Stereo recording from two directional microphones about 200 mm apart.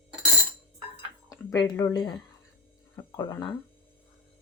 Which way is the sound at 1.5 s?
20° left (ahead or behind).